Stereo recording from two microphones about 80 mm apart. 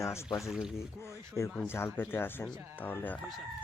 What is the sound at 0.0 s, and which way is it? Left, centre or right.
Speech, left.